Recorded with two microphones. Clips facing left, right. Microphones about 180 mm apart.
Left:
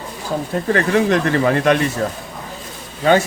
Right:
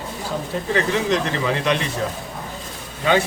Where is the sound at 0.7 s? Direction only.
55° left (ahead or behind).